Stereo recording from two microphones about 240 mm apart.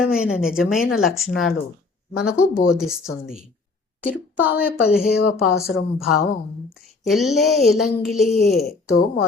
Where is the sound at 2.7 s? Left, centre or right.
Centre.